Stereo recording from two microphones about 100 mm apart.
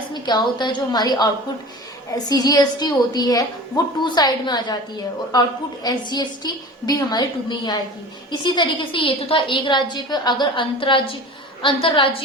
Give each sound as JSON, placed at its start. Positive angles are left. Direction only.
{"t": 0.1, "sound": "a woman's voice", "side_deg": 45}